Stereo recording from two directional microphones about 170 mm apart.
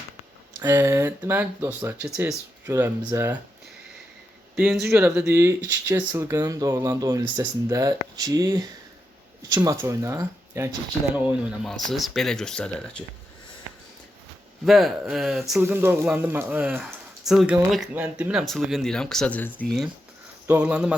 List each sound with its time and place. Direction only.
0.6 s speech: 20° right (ahead or behind)
4.5 s a man's voice: 10° right (ahead or behind); by 13.1 s 5° left (ahead or behind)
14.6 s speech: centre (ahead or behind)
15.6 s speech: 15° right (ahead or behind)